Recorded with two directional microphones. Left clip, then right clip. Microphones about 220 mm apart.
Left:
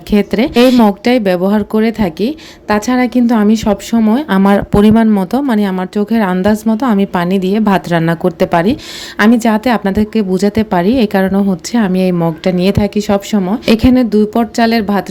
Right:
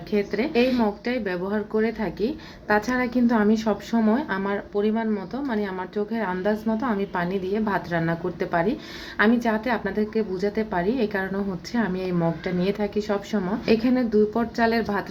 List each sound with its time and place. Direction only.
0.1 s a woman's voice: 55° left (ahead or behind)